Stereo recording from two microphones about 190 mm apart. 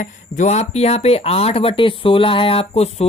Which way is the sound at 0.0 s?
40° left (ahead or behind).